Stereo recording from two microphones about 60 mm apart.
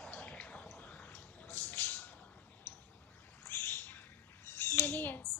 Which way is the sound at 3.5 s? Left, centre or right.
Left.